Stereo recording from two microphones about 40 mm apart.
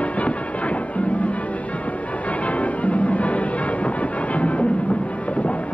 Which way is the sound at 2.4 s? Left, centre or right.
Left.